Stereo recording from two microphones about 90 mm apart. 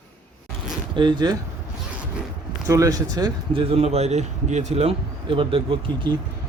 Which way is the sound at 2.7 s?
40° right (ahead or behind).